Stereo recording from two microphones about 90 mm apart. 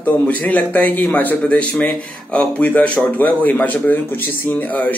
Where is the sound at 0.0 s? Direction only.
15° left (ahead or behind).